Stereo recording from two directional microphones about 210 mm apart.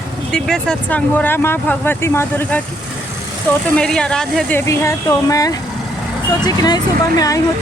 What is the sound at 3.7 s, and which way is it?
Speech, 5° left (ahead or behind).